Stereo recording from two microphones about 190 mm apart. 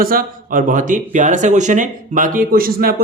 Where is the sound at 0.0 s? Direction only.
50° right (ahead or behind).